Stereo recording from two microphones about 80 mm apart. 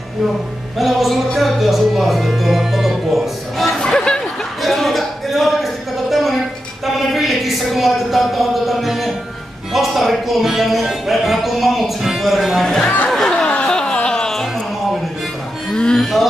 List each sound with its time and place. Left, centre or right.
0.7 s music: centre
7.0 s a sound: centre
9.7 s speech: centre
13.1 s music: centre
15.7 s music: centre